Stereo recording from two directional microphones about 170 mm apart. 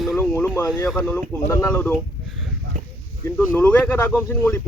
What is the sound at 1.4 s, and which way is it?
Speech, 15° left (ahead or behind).